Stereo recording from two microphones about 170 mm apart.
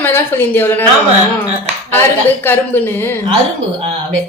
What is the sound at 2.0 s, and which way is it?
A woman's voice, 10° left (ahead or behind).